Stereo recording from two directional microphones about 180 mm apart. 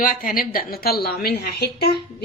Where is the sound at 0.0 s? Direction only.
50° left (ahead or behind).